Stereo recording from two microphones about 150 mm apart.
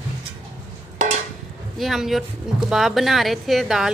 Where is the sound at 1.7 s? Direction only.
Centre (ahead or behind).